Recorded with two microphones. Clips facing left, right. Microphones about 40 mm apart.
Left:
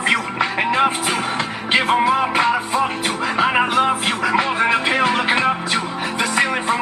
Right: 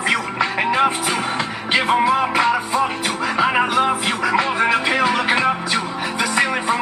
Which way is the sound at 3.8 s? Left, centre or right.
Centre.